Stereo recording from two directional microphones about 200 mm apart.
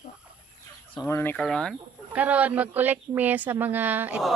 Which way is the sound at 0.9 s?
10° left (ahead or behind).